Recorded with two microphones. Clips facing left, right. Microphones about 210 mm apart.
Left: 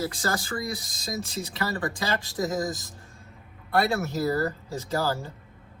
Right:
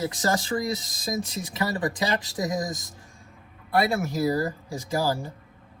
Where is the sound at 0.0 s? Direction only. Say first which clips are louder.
Right 3 dB; 25° right (ahead or behind).